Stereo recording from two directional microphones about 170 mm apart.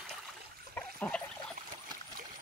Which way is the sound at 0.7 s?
5° left (ahead or behind).